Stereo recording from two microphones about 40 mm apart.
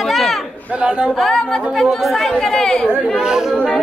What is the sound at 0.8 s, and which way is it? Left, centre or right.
Speech, right.